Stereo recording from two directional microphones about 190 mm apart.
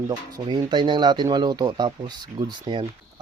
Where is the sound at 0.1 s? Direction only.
20° right (ahead or behind).